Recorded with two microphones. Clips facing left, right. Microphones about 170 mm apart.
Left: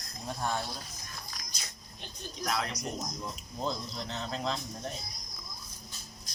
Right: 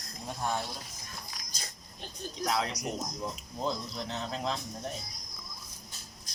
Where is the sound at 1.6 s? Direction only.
40° right (ahead or behind).